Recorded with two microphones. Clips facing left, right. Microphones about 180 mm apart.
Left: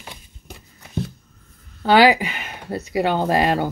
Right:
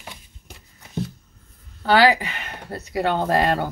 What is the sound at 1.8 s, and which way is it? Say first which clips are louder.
Speech: left 3 dB; 15° left (ahead or behind).